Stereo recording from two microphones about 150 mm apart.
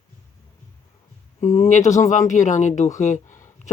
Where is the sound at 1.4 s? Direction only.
50° left (ahead or behind).